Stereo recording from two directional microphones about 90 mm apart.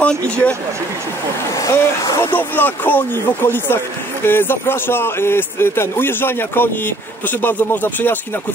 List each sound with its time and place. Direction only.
0.0 s speech: 15° left (ahead or behind)
1.5 s speech: 40° left (ahead or behind)
2.3 s speech: 20° left (ahead or behind)